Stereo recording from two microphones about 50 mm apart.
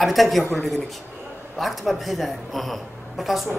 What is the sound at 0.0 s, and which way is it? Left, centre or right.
Speech, centre.